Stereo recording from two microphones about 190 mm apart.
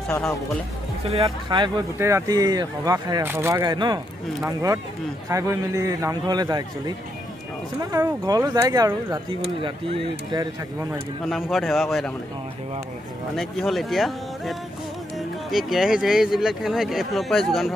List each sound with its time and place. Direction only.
1.0 s speech: 30° right (ahead or behind)
2.0 s speech: 15° right (ahead or behind)
7.8 s speech: 20° right (ahead or behind)
11.5 s speech: centre (ahead or behind)
13.4 s speech: centre (ahead or behind)